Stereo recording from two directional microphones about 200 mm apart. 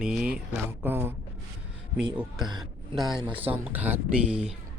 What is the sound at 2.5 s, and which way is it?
Speech, 20° right (ahead or behind).